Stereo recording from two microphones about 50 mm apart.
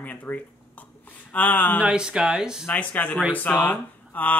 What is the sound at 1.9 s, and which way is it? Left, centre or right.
Speech, centre.